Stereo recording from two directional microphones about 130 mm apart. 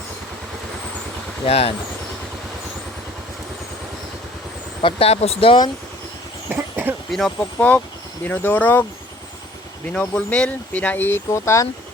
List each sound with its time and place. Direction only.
1.5 s speech: 50° left (ahead or behind)
4.8 s speech: 45° left (ahead or behind)
6.5 s vehicle: 15° right (ahead or behind)
7.1 s speech: 5° left (ahead or behind)
9.9 s speech: 10° left (ahead or behind)